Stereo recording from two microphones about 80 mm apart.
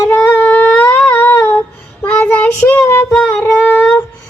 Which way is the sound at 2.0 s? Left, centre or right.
Centre.